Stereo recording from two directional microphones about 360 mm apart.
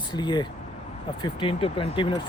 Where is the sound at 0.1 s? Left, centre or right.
Centre.